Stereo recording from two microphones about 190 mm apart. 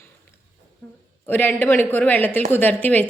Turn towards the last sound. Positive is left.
turn(degrees=10)  # may be behind; listen again after turning